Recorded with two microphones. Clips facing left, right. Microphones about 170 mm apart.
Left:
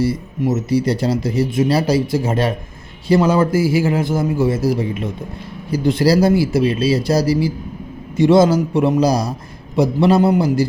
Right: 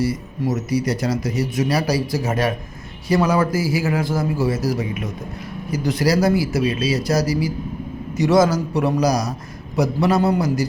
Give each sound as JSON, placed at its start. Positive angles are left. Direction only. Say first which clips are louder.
{"t": 0.0, "sound": "speech", "louder": "left 3 dB", "side_deg": 25}